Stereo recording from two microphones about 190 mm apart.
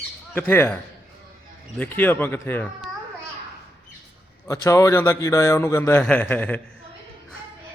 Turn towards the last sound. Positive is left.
turn(degrees=10)  # may be behind; listen again after turning